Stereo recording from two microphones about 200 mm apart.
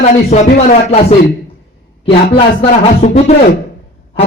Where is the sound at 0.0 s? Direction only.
35° left (ahead or behind).